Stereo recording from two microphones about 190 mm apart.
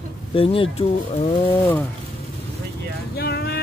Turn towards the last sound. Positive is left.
turn(degrees=55)  # may be behind; listen again after turning